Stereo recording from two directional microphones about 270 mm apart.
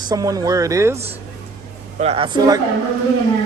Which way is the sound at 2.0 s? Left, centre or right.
Right.